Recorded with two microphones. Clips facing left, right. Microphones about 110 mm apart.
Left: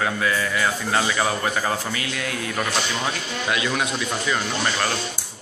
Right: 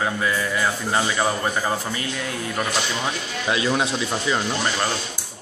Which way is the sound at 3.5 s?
30° right (ahead or behind).